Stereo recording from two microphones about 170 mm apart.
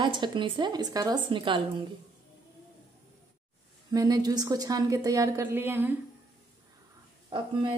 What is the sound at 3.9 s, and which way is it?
A woman's voice, 20° right (ahead or behind).